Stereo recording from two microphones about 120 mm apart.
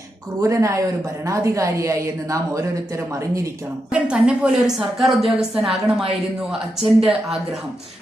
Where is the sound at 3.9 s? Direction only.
10° right (ahead or behind).